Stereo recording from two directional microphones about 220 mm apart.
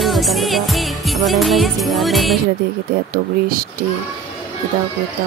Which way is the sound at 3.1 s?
40° right (ahead or behind).